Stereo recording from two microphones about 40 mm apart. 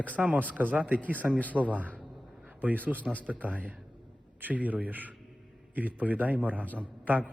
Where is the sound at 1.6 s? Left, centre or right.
Right.